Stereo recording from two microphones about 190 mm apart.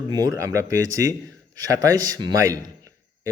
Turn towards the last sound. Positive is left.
turn(degrees=-20)  # may be behind; listen again after turning